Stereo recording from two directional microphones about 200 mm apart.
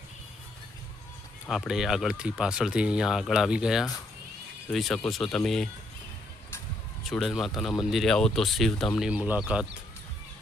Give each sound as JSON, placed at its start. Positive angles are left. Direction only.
{"t": 1.5, "sound": "speech", "side_deg": 0}
{"t": 7.0, "sound": "speech", "side_deg": 0}